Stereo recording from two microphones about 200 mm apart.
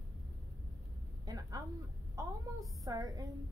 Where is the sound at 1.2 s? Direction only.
20° right (ahead or behind).